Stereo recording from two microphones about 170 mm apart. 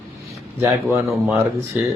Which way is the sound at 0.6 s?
15° right (ahead or behind).